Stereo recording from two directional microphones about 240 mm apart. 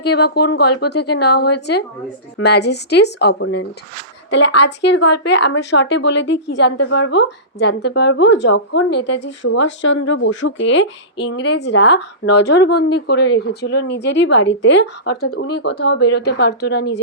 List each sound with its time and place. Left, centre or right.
0.0 s a woman's voice: left